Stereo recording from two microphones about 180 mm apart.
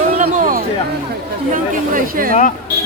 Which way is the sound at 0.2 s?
45° right (ahead or behind).